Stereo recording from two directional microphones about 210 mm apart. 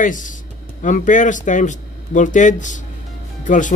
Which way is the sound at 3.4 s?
35° left (ahead or behind).